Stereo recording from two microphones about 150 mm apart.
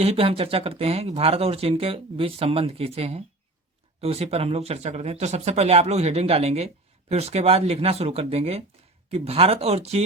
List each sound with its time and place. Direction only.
0.0 s speech: 40° right (ahead or behind)